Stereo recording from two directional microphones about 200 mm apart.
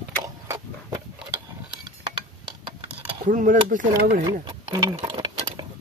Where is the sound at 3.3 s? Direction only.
40° right (ahead or behind).